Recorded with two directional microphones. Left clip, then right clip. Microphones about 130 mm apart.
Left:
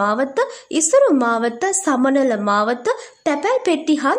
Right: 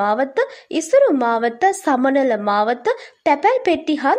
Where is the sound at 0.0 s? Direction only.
20° right (ahead or behind).